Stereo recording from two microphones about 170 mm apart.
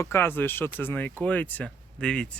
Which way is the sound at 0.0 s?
15° left (ahead or behind).